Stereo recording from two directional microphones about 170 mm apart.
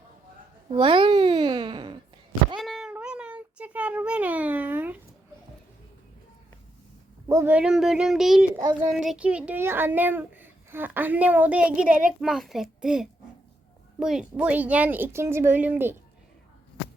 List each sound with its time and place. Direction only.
0.7 s babbling: 30° right (ahead or behind)
2.6 s cat: centre (ahead or behind)
2.9 s a sound: 5° right (ahead or behind)
7.3 s a child's voice: 15° right (ahead or behind)